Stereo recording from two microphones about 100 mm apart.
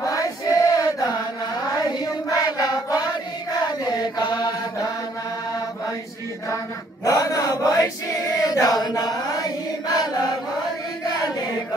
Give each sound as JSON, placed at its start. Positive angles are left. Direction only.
{"t": 0.0, "sound": "chant", "side_deg": 35}
{"t": 2.2, "sound": "a sound", "side_deg": 40}
{"t": 3.9, "sound": "chant", "side_deg": 45}
{"t": 7.1, "sound": "chant", "side_deg": 35}